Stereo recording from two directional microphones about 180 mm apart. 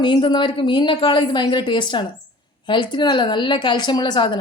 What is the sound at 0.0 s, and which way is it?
A woman's voice, 25° left (ahead or behind).